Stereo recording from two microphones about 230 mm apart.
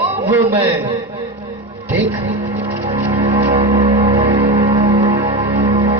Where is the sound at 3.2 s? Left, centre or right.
Right.